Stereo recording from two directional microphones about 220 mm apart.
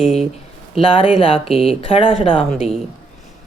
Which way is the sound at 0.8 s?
25° left (ahead or behind).